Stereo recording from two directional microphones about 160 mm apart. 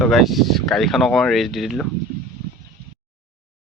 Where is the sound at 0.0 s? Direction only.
Centre (ahead or behind).